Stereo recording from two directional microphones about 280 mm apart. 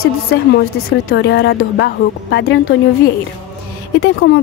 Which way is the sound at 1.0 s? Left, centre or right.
Left.